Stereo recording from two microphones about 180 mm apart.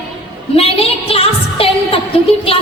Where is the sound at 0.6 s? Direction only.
35° left (ahead or behind).